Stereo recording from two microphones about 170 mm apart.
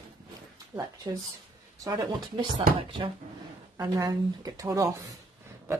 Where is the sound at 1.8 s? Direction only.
25° right (ahead or behind).